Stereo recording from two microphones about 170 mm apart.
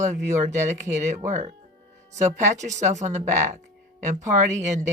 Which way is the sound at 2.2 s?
45° right (ahead or behind).